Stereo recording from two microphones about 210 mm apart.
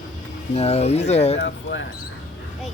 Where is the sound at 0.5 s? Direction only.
30° left (ahead or behind).